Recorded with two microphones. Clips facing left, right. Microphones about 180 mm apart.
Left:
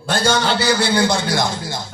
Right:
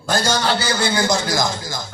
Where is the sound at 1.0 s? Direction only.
30° left (ahead or behind).